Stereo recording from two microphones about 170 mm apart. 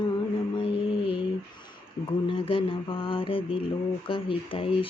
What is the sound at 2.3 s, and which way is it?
Mantra, 30° left (ahead or behind).